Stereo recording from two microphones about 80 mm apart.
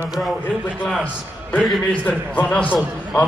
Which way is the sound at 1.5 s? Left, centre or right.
Centre.